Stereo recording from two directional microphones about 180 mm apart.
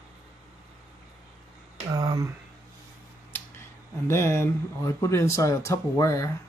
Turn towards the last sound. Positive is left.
turn(degrees=20)  # may be behind; listen again after turning